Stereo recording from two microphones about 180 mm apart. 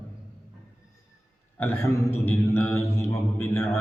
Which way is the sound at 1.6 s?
10° left (ahead or behind).